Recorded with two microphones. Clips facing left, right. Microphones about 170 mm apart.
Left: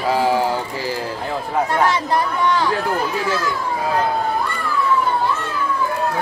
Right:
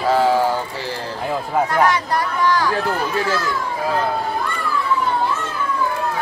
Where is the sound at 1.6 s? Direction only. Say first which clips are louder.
Left 1 dB; 25° left (ahead or behind).